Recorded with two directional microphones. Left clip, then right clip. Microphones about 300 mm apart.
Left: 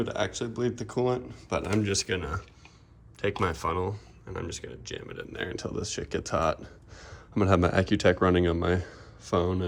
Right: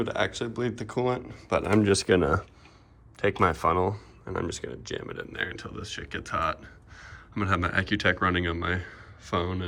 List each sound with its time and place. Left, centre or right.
0.0 s speech: centre